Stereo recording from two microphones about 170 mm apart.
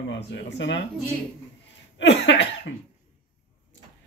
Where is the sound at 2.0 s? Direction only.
90° left.